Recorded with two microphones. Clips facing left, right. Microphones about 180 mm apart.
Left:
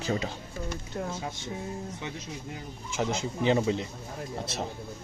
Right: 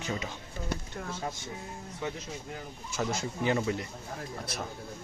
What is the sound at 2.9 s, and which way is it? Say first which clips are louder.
Speech: left 2 dB; 20° left (ahead or behind).